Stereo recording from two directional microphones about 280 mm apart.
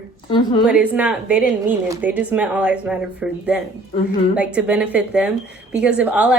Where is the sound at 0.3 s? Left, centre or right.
Centre.